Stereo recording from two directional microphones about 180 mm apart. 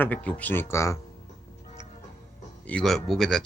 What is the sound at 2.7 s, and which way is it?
Speech, 5° left (ahead or behind).